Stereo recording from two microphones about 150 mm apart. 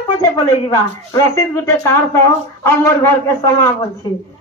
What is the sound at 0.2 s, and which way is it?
Speech, 25° left (ahead or behind).